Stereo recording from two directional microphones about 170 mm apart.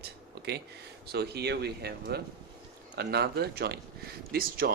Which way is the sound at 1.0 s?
70° right (ahead or behind).